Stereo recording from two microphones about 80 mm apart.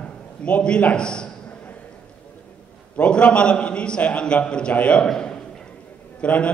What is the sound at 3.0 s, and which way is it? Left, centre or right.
A man's voice, centre.